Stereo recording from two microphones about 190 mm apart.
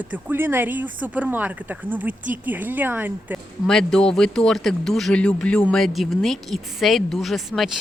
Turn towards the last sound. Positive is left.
turn(degrees=0)  # may be behind; listen again after turning